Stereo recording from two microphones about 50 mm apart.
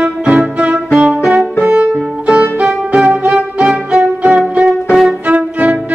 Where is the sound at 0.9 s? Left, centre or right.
Centre.